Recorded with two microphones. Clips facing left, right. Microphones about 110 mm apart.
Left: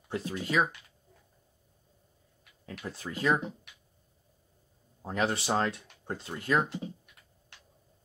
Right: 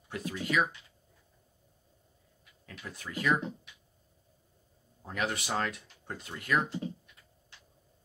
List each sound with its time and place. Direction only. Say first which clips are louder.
0.1 s speech: left 2 dB; 30° left (ahead or behind)
2.6 s speech: left 5 dB; 30° left (ahead or behind)
5.0 s speech: left 4 dB; 30° left (ahead or behind)